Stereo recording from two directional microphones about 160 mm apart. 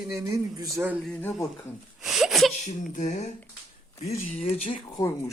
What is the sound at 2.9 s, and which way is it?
Speech, 50° left (ahead or behind).